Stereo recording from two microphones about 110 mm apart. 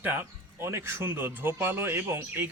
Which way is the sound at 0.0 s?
20° right (ahead or behind).